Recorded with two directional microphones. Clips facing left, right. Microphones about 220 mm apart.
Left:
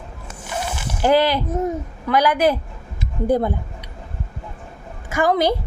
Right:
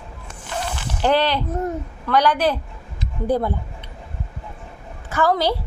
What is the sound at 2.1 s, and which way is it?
A woman's voice, 10° left (ahead or behind).